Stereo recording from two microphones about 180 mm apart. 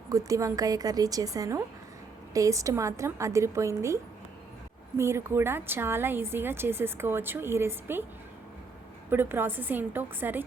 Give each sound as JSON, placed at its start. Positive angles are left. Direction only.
{"t": 0.1, "sound": "a woman's voice", "side_deg": -20}
{"t": 9.0, "sound": "a woman's voice", "side_deg": -10}